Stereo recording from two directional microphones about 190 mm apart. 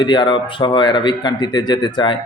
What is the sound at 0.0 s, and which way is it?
A man's voice, 25° left (ahead or behind).